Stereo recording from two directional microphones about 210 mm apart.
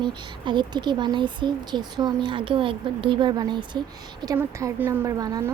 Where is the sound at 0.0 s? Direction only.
20° right (ahead or behind).